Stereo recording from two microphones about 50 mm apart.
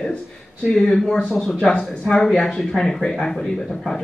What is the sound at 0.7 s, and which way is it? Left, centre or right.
Speech, centre.